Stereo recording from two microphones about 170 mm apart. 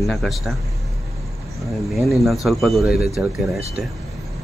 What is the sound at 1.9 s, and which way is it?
Speech, centre (ahead or behind).